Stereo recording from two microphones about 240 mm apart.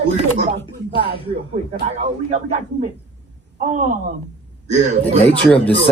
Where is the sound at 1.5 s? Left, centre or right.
Right.